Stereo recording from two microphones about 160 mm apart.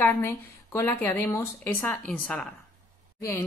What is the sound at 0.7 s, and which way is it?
Speech, 15° left (ahead or behind).